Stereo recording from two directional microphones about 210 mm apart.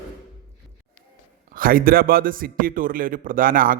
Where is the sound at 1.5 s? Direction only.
40° right (ahead or behind).